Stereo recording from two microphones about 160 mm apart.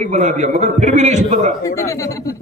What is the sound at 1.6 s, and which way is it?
Speech, 20° left (ahead or behind).